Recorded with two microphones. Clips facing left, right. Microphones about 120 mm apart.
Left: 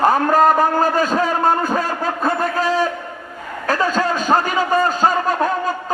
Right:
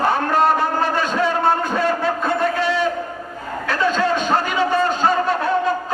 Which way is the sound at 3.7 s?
40° left (ahead or behind).